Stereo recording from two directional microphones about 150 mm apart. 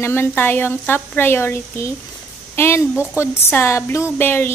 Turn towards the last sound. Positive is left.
turn(degrees=15)  # may be behind; listen again after turning